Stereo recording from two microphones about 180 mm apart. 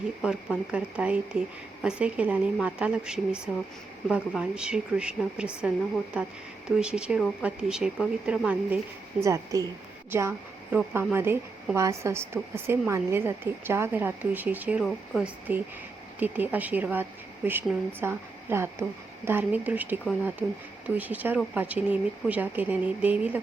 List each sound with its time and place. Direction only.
0.2 s a woman's voice: 5° right (ahead or behind)
9.2 s a woman's voice: 20° right (ahead or behind)